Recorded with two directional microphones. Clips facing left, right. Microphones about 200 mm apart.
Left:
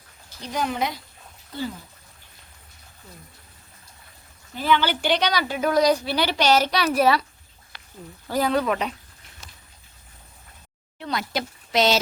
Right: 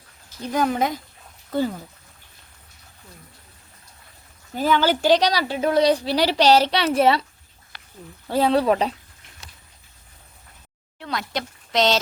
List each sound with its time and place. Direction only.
0.4 s speech: 50° right (ahead or behind)
4.5 s a woman's voice: 40° right (ahead or behind)
8.3 s a woman's voice: 30° right (ahead or behind)
11.0 s speech: centre (ahead or behind)